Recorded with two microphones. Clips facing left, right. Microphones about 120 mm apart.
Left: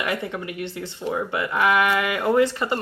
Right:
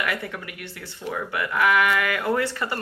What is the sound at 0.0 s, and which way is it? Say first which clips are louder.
Speech: left 2 dB; 25° left (ahead or behind).